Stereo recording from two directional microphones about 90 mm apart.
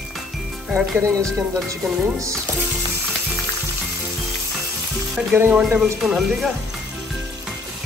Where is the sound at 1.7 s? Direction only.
35° right (ahead or behind).